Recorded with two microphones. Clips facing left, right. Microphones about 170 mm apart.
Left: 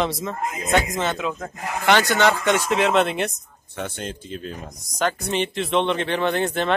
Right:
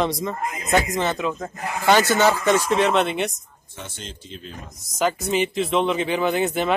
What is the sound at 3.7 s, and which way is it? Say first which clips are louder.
Speech: left 7 dB; 60° left (ahead or behind).